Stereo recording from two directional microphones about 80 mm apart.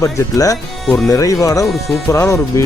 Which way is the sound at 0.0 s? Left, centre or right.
Left.